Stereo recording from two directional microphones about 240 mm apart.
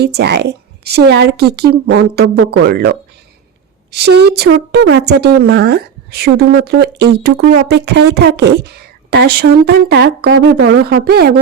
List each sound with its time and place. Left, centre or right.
0.0 s speech: right
4.0 s speech: right